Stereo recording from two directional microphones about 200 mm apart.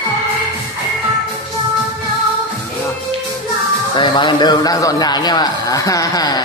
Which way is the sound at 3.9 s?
25° left (ahead or behind).